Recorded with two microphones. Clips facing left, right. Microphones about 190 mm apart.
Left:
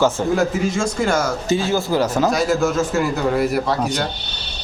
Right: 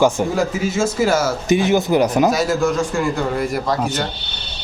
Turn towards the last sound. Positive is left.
turn(degrees=0)  # may be behind; listen again after turning